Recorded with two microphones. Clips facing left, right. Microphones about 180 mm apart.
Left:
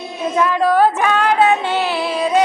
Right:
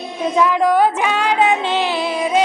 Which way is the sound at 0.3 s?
15° right (ahead or behind).